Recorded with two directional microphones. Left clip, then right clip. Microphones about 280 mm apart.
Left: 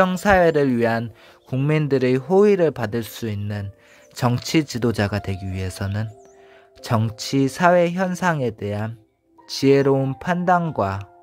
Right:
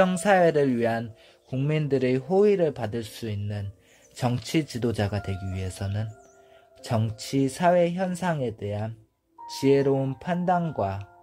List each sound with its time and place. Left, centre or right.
0.0 s speech: centre